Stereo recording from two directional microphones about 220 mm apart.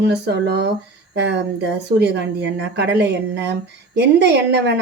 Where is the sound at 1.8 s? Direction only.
50° right (ahead or behind).